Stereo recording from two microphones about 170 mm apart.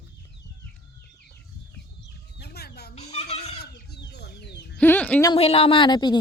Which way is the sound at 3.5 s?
70° left (ahead or behind).